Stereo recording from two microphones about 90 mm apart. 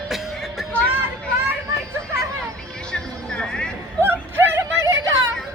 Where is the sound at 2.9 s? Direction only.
10° left (ahead or behind).